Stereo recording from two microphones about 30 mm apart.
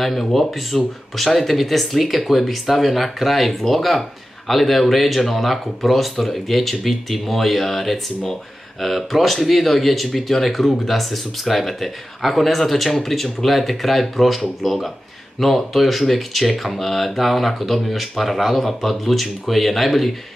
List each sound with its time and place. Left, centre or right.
0.0 s speech: centre